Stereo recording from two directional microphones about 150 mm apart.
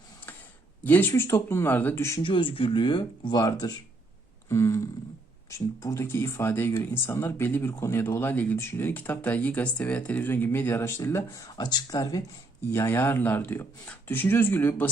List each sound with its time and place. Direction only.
0.9 s speech: 15° left (ahead or behind)
2.2 s speech: 35° left (ahead or behind)
4.4 s a sound: 20° left (ahead or behind)
5.5 s speech: 20° left (ahead or behind)